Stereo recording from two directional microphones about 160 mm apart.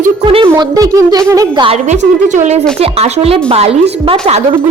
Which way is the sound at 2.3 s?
45° right (ahead or behind).